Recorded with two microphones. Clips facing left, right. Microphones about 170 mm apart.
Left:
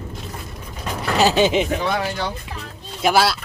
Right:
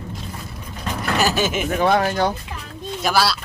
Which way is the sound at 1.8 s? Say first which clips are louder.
Right 5 dB; 50° right (ahead or behind).